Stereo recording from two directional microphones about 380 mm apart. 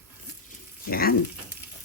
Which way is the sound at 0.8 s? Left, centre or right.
Left.